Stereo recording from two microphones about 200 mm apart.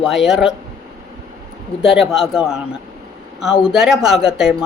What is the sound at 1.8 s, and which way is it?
Speech, 5° right (ahead or behind).